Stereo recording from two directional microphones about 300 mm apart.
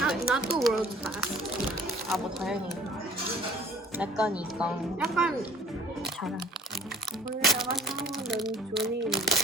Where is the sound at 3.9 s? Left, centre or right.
Centre.